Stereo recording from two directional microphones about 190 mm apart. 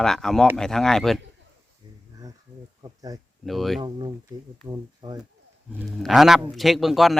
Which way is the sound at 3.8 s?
25° right (ahead or behind).